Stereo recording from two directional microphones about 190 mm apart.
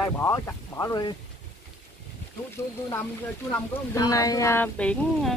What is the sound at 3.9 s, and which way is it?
Speech, 20° left (ahead or behind).